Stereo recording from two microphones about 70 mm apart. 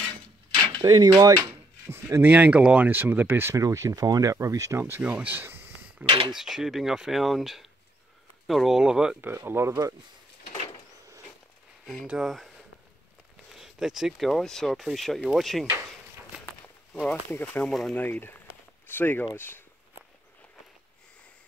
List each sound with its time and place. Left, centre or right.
0.6 s speech: right
1.9 s speech: right
2.2 s speech: right
3.5 s speech: right
4.7 s speech: right
5.0 s a sound: right
6.3 s speech: centre
9.2 s speech: right
11.8 s speech: centre
13.5 s speech: centre
16.9 s speech: centre
17.6 s speech: centre
17.9 s speech: left